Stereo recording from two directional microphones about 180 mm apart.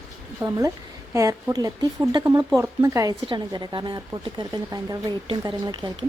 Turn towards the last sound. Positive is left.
turn(degrees=-25)  # may be behind; listen again after turning